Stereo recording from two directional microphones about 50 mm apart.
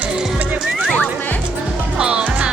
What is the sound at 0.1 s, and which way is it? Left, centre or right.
Music, centre.